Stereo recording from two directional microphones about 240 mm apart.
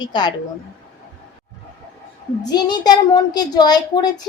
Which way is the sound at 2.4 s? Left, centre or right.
Centre.